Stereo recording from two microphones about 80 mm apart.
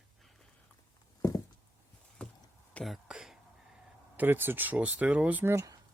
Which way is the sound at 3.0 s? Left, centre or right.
Centre.